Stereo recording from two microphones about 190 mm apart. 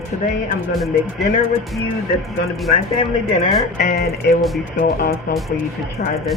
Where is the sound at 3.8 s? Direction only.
45° left (ahead or behind).